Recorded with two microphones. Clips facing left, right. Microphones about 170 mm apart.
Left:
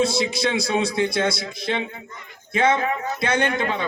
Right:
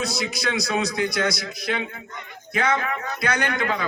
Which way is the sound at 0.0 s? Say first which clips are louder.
Left 6 dB; 25° left (ahead or behind).